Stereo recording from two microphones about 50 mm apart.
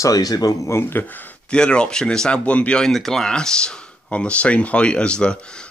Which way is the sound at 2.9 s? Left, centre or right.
Centre.